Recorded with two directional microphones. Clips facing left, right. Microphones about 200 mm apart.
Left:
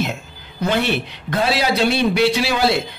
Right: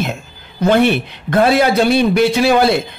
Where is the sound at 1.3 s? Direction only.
50° right (ahead or behind).